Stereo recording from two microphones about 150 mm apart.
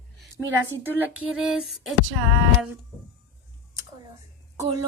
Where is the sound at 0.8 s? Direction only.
10° right (ahead or behind).